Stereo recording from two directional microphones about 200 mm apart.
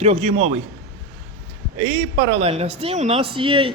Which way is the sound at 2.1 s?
65° right (ahead or behind).